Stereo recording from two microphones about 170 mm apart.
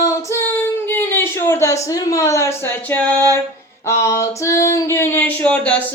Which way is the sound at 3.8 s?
15° left (ahead or behind).